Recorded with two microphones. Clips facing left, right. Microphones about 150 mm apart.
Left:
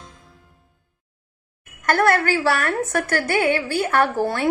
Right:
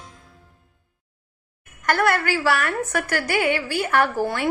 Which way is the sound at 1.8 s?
50° left (ahead or behind).